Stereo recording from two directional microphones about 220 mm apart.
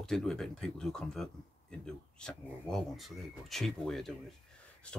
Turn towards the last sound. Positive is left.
turn(degrees=5)  # may be behind; listen again after turning